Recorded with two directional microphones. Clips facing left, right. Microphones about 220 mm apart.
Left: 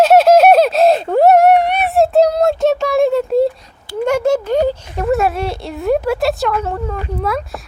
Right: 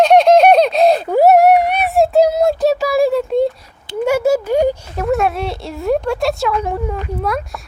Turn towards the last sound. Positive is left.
turn(degrees=0)  # may be behind; listen again after turning